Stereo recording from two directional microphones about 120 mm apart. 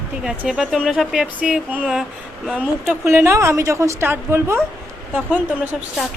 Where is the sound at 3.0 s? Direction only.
20° right (ahead or behind).